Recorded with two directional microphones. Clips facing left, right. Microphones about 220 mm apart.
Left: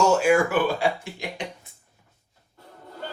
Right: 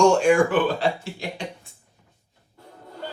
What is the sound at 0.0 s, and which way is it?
Speech, 5° left (ahead or behind).